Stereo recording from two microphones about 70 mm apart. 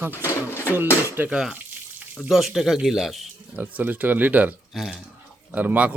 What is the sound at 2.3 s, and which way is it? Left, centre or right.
Speech, centre.